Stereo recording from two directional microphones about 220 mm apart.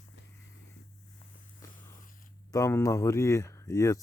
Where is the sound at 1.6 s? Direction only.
15° left (ahead or behind).